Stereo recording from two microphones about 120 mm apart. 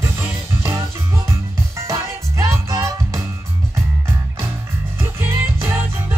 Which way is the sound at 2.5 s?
25° right (ahead or behind).